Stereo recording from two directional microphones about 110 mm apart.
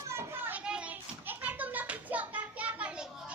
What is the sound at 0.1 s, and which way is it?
Children playing, 25° right (ahead or behind).